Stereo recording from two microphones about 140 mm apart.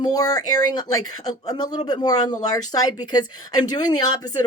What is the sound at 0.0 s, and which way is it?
Speech, 25° left (ahead or behind).